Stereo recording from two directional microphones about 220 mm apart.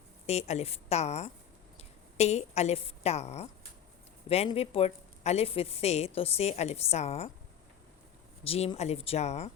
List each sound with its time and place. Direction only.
0.3 s a woman's voice: 30° left (ahead or behind)
8.4 s a woman's voice: 25° left (ahead or behind)